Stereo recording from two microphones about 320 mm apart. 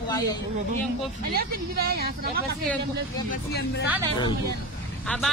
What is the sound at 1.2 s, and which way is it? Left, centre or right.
Speech, right.